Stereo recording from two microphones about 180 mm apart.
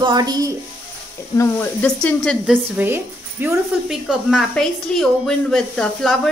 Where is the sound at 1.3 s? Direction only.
15° left (ahead or behind).